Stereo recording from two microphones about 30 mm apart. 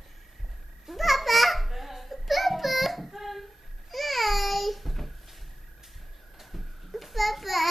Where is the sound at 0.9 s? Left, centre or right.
Centre.